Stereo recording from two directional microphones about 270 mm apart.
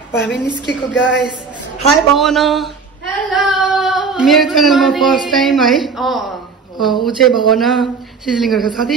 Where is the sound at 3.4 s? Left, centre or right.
Centre.